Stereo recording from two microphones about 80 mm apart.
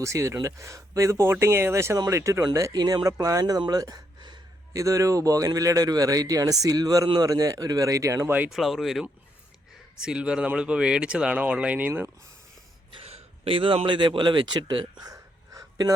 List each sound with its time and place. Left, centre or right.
0.0 s speech: right
2.7 s a man's voice: right
3.7 s gasp: right
4.7 s a man's voice: right
8.4 s speech: centre; by 12.1 s right
13.6 s speech: right
15.0 s a sound: right